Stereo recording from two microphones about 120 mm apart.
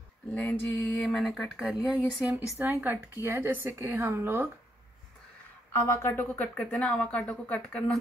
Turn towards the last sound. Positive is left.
turn(degrees=10)  # may be behind; listen again after turning